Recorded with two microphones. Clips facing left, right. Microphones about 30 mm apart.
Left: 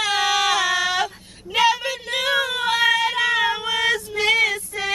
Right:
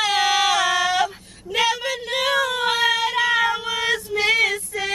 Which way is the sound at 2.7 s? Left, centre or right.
Centre.